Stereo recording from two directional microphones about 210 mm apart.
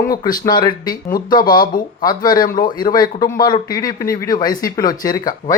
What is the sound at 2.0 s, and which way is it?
Speech, 20° left (ahead or behind).